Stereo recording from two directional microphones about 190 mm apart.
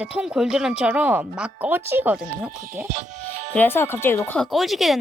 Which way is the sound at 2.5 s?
45° right (ahead or behind).